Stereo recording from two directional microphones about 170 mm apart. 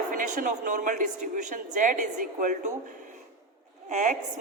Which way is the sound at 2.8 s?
50° right (ahead or behind).